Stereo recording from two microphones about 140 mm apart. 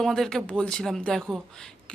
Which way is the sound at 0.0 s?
5° left (ahead or behind).